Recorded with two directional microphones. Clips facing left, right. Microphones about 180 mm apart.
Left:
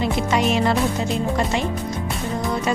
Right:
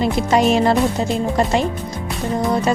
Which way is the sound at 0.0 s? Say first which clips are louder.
Right 4 dB; 35° right (ahead or behind).